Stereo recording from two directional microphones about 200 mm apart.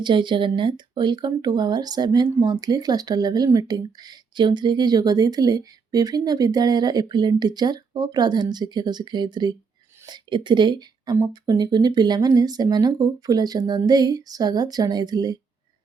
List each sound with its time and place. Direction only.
0.0 s speech: 25° right (ahead or behind)